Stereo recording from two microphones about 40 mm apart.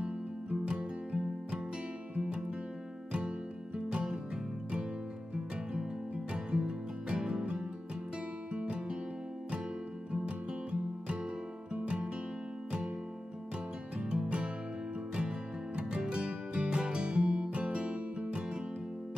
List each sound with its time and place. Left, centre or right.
0.0 s music: right
5.3 s music: right
10.1 s music: right
14.0 s music: centre